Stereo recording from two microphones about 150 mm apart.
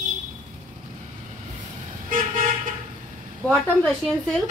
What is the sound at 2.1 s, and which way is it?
Vehicle, 65° right (ahead or behind).